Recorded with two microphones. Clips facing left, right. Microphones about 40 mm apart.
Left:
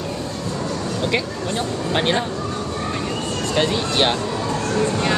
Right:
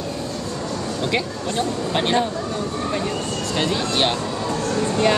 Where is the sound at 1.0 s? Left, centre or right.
Centre.